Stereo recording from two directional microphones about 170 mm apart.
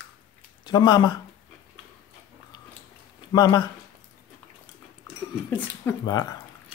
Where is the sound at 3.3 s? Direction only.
25° left (ahead or behind).